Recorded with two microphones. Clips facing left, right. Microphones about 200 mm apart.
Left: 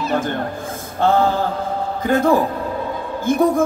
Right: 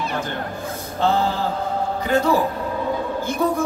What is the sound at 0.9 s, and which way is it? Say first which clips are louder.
Mantra: left 4 dB; 50° left (ahead or behind).